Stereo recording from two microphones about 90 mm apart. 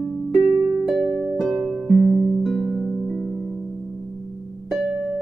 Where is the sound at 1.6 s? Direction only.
5° left (ahead or behind).